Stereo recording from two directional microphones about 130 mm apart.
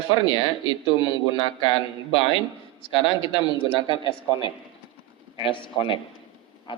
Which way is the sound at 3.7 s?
40° left (ahead or behind).